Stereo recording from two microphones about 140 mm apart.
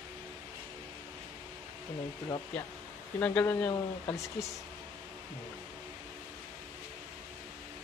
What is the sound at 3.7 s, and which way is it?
Speech, 25° left (ahead or behind).